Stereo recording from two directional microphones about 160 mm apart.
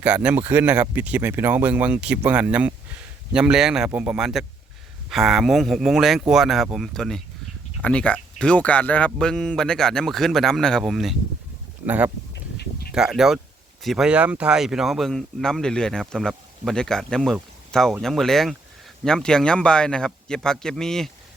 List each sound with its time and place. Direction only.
0.0 s speech: 10° right (ahead or behind)
12.3 s a sound: 90° left
12.9 s speech: 5° right (ahead or behind)